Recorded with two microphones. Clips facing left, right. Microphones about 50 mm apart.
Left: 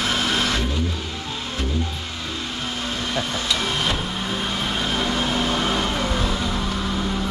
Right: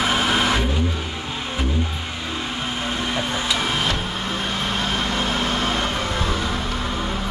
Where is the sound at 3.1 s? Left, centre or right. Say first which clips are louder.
Left 1 dB; centre.